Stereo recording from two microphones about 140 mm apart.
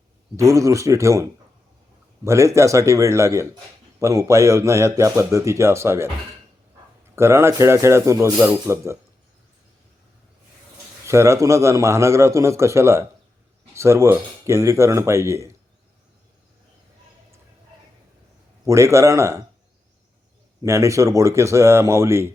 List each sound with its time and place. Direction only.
0.3 s a man's voice: 20° right (ahead or behind)
7.2 s a man's voice: 20° right (ahead or behind)
8.4 s a man's voice: 10° right (ahead or behind)
11.0 s a man's voice: 20° right (ahead or behind)
18.6 s a man's voice: 20° right (ahead or behind)
20.6 s a man's voice: 20° right (ahead or behind)